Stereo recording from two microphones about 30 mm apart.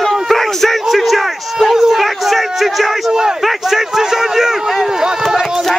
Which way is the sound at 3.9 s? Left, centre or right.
Centre.